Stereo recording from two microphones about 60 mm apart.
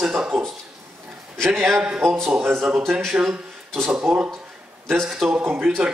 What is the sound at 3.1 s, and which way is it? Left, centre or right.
Speech, centre.